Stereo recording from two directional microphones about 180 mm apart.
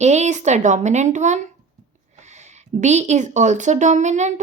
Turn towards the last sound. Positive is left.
turn(degrees=-40)  # may be behind; listen again after turning